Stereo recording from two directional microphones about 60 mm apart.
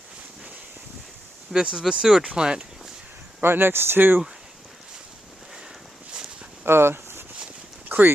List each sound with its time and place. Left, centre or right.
1.5 s speech: centre
3.4 s speech: right
6.7 s a sound: right
7.9 s dog: right